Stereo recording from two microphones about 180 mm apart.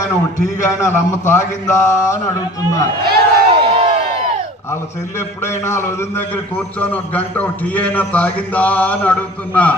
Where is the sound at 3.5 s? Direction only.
30° right (ahead or behind).